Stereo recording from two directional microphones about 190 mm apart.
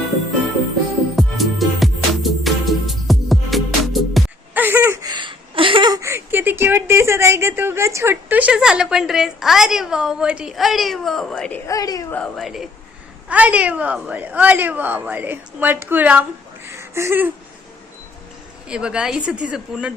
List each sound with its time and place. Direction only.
1.1 s music: centre (ahead or behind)
4.6 s a sound: 10° right (ahead or behind)
5.1 s a woman's voice: 25° right (ahead or behind); by 11.6 s 5° left (ahead or behind)
11.7 s speech: 20° left (ahead or behind)
12.1 s a woman's voice: centre (ahead or behind)
16.6 s a sound: 15° right (ahead or behind)
18.7 s a woman's voice: 5° right (ahead or behind)